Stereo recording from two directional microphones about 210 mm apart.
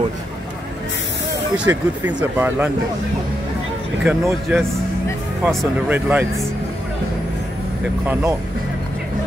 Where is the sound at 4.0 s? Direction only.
5° right (ahead or behind).